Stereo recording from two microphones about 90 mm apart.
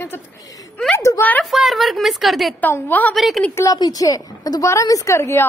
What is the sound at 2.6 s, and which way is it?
Speech, 20° left (ahead or behind).